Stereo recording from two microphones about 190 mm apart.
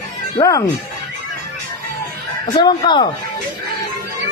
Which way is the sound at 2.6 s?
25° left (ahead or behind).